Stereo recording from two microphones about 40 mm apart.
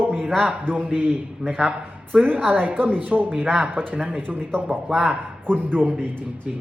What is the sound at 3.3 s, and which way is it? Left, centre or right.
Speech, right.